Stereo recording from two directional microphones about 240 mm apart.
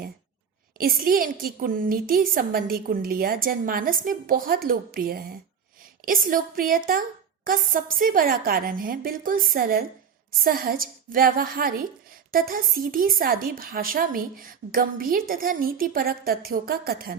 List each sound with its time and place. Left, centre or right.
0.8 s a woman's voice: right